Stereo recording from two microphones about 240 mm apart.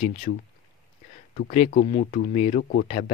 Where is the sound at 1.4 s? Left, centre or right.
Left.